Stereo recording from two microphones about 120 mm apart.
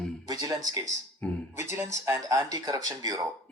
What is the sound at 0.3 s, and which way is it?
Speech, 30° right (ahead or behind).